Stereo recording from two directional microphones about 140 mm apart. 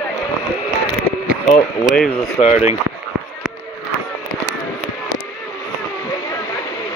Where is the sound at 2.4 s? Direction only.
40° left (ahead or behind).